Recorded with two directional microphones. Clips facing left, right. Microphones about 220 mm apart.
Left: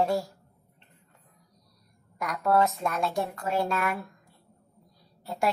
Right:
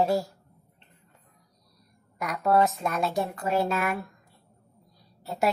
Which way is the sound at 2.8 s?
5° right (ahead or behind).